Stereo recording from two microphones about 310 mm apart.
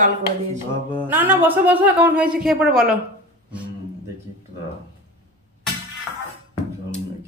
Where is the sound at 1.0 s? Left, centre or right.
Centre.